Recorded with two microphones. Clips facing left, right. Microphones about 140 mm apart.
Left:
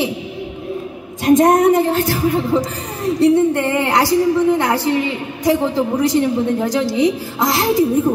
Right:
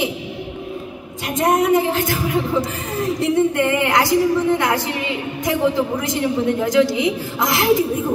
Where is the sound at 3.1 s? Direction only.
35° left (ahead or behind).